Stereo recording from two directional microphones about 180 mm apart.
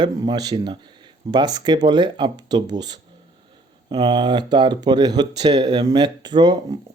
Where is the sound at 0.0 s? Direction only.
20° right (ahead or behind).